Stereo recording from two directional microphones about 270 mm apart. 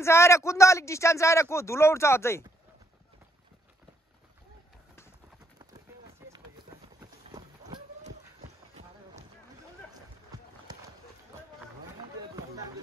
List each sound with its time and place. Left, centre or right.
0.0 s speech: centre
6.2 s run: centre; by 9.2 s right